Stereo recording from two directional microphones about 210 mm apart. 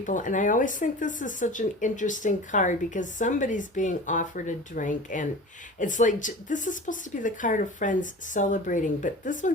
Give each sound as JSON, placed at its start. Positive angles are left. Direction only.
{"t": 0.0, "sound": "speech", "side_deg": 40}